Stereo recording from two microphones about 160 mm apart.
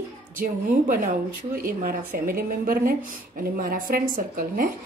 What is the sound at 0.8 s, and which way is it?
A woman's voice, 60° right (ahead or behind).